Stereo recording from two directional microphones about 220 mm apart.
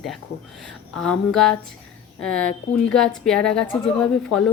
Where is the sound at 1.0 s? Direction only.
Centre (ahead or behind).